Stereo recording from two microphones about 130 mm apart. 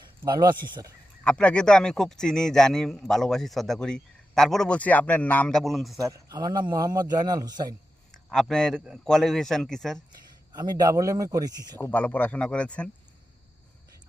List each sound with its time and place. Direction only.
0.0 s speech: 35° right (ahead or behind)
1.2 s a man's voice: 10° left (ahead or behind)
6.0 s a man's voice: 25° right (ahead or behind)
8.1 s a man's voice: 5° left (ahead or behind)
10.5 s a man's voice: 30° right (ahead or behind)
11.9 s speech: 10° left (ahead or behind)